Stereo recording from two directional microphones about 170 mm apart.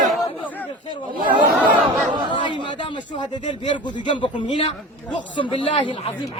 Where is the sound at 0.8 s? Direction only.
30° left (ahead or behind).